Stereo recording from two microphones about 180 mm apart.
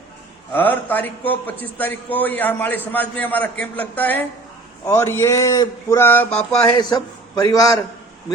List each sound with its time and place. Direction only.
0.5 s speech: 10° left (ahead or behind)
6.7 s a man's voice: 25° left (ahead or behind)